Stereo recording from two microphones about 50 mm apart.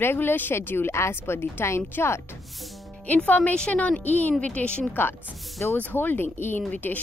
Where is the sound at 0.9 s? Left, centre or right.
Left.